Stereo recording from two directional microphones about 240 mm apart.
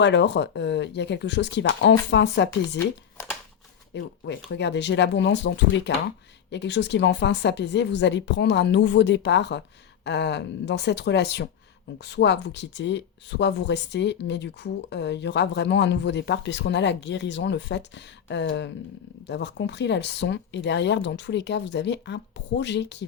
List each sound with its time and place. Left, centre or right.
0.0 s speech: left
2.7 s a sound: centre
3.9 s speech: left